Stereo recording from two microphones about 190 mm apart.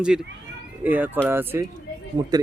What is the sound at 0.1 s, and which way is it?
A man's voice, 5° right (ahead or behind).